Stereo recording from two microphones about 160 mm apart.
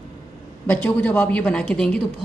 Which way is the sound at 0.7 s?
10° left (ahead or behind).